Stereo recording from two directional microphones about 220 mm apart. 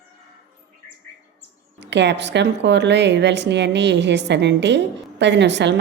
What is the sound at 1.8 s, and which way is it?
A woman's voice, 55° right (ahead or behind).